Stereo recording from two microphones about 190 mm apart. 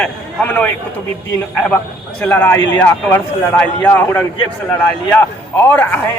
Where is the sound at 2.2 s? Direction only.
10° left (ahead or behind).